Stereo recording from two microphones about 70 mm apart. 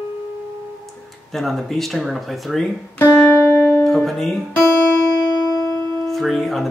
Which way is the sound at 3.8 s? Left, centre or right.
Centre.